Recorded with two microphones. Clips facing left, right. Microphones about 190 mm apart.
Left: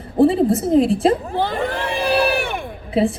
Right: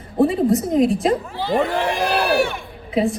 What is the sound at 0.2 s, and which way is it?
Speech, 30° left (ahead or behind).